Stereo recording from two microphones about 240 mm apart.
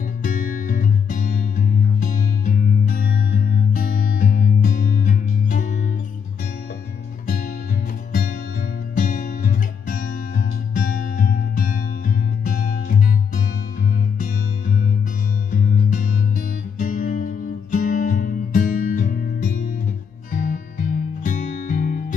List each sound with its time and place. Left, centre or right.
0.2 s music: left
8.9 s music: left
14.1 s music: left